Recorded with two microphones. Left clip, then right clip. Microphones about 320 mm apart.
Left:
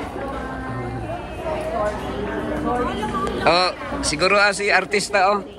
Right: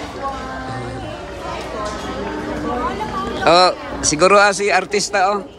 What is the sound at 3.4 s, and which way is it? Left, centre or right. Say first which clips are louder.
A man's voice: right 6 dB; centre.